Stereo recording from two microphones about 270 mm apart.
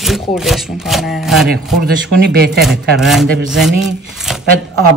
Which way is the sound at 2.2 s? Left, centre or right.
Right.